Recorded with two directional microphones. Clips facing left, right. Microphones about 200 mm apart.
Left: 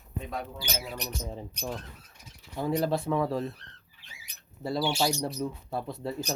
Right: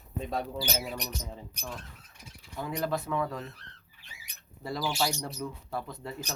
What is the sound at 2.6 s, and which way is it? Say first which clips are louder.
Speech: left 4 dB; 25° left (ahead or behind).